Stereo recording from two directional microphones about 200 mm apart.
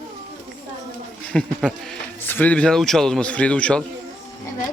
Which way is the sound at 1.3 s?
5° left (ahead or behind).